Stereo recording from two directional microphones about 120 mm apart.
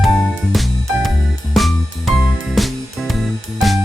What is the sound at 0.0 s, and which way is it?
Music, centre (ahead or behind).